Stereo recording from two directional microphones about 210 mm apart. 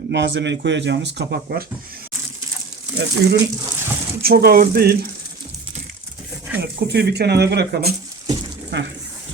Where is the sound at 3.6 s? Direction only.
10° right (ahead or behind).